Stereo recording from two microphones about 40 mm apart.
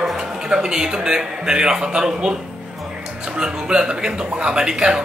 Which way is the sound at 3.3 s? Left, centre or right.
Right.